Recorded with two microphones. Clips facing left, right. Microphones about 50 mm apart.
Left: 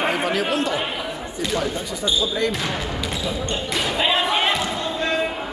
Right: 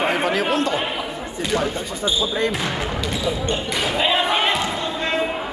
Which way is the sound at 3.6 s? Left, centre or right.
Centre.